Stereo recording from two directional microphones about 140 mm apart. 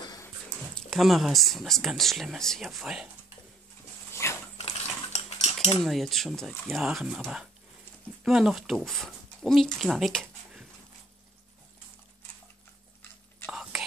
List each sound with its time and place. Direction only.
0.0 s dog: 30° left (ahead or behind)
0.7 s speech: centre (ahead or behind)
4.1 s a sound: 20° left (ahead or behind)
4.6 s cutlery: 45° left (ahead or behind)
5.9 s speech: centre (ahead or behind)
13.5 s whispering: 5° right (ahead or behind)